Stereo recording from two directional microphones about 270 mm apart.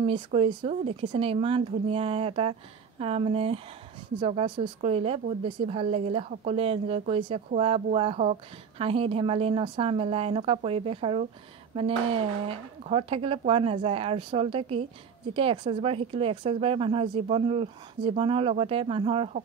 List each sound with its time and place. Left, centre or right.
0.0 s a woman's voice: right